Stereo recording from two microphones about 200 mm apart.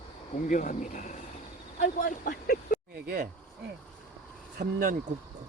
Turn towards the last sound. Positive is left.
turn(degrees=-45)  # may be behind; listen again after turning